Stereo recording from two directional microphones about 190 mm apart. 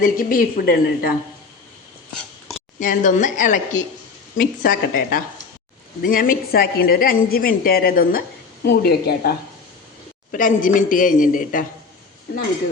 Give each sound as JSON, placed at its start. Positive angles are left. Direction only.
{"t": 0.0, "sound": "a woman's voice", "side_deg": 45}
{"t": 2.8, "sound": "a woman's voice", "side_deg": 45}
{"t": 10.3, "sound": "a woman's voice", "side_deg": 45}